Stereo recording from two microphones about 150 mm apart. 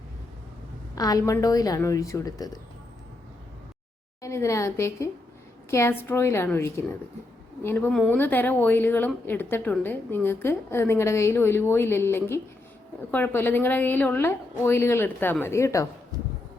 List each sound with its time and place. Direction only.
0.9 s a woman's voice: 25° left (ahead or behind)
4.2 s a woman's voice: 20° left (ahead or behind)